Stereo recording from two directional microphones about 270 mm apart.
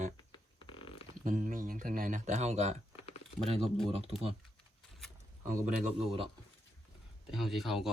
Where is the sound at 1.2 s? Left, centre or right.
Right.